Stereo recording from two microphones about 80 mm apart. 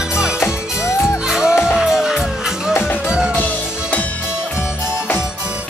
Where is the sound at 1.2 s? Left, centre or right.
Centre.